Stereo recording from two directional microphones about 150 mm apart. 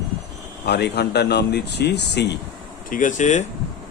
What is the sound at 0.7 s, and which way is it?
Speech, 90° left.